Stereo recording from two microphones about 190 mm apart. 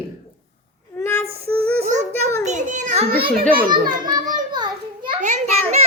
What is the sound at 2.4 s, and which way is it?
Speech, 40° right (ahead or behind).